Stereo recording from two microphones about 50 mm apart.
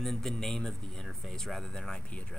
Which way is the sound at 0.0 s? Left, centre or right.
Centre.